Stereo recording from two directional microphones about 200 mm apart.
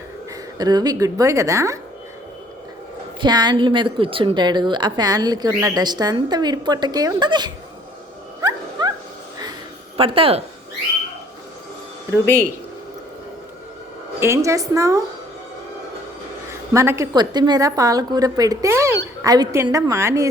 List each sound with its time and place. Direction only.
0.6 s a woman's voice: 20° right (ahead or behind)
3.2 s a woman's voice: 20° right (ahead or behind)
8.4 s dog: 20° right (ahead or behind)
10.0 s a woman's voice: 25° right (ahead or behind)
12.2 s speech: 10° left (ahead or behind)
14.2 s a woman's voice: 15° right (ahead or behind)
16.5 s a woman's voice: 15° right (ahead or behind)